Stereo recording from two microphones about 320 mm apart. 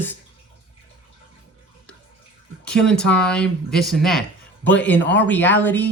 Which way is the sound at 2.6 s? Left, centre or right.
Centre.